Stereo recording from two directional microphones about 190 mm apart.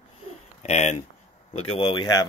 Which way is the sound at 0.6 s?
35° left (ahead or behind).